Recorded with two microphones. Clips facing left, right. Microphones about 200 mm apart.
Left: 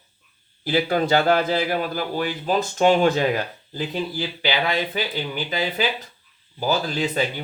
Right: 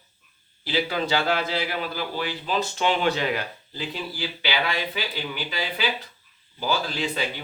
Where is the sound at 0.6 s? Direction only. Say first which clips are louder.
Left 5 dB; 50° left (ahead or behind).